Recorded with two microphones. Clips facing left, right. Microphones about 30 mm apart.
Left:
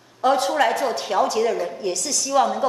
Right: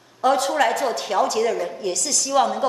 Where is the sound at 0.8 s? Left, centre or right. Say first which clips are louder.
Even; right.